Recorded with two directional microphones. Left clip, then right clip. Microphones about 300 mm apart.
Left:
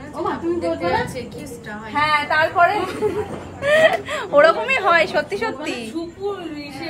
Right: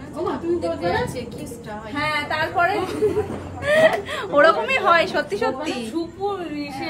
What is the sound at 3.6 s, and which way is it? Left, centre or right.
Speech, centre.